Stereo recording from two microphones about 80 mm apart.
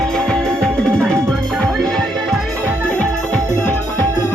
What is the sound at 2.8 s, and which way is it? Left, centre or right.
Music, centre.